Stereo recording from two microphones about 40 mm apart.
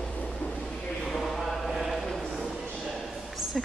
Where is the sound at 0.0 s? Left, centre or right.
Left.